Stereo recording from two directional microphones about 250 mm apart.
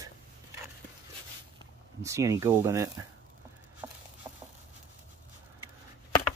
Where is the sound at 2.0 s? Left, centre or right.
Centre.